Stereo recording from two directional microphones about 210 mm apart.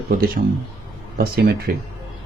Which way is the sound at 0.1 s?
45° right (ahead or behind).